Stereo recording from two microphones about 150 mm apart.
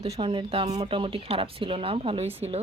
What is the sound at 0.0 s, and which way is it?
A woman's voice, 35° right (ahead or behind).